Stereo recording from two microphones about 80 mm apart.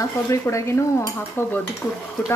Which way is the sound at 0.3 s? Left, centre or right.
Left.